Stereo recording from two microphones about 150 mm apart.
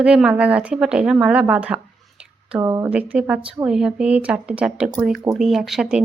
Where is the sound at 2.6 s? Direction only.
20° right (ahead or behind).